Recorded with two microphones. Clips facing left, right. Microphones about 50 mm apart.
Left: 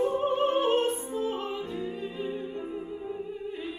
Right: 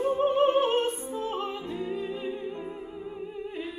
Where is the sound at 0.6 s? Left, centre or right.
Right.